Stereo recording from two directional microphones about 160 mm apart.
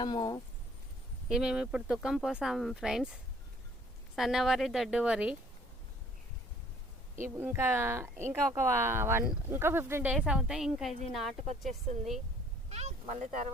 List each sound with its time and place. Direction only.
0.0 s speech: 25° left (ahead or behind)
1.3 s speech: 5° right (ahead or behind)
7.2 s speech: 15° right (ahead or behind)
12.7 s speech: 45° right (ahead or behind)